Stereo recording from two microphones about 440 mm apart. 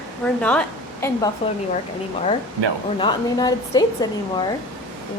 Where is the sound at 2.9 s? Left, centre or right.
Centre.